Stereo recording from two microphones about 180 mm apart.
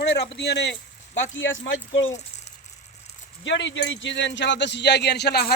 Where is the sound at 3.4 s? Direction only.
90° left; by 5.5 s 65° left (ahead or behind).